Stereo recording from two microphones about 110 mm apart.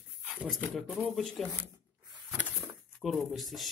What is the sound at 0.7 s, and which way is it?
Speech, centre (ahead or behind).